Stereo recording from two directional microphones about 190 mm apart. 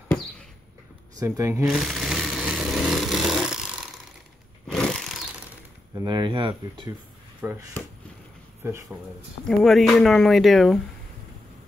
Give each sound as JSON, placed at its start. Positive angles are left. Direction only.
{"t": 1.2, "sound": "speech", "side_deg": -15}
{"t": 1.7, "sound": "a sound", "side_deg": 0}
{"t": 5.9, "sound": "speech", "side_deg": -25}
{"t": 7.4, "sound": "speech", "side_deg": -10}
{"t": 9.6, "sound": "speech", "side_deg": 0}